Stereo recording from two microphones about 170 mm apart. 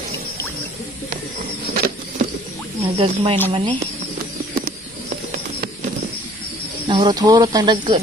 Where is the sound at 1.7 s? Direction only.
60° right (ahead or behind).